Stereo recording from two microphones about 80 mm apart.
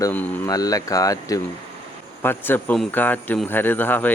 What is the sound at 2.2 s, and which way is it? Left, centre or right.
A man's voice, left.